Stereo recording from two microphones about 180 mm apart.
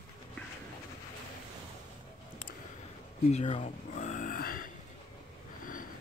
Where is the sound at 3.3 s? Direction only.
40° left (ahead or behind).